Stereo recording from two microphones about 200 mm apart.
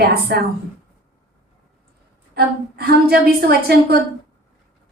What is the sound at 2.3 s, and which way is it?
A woman's voice, 50° right (ahead or behind).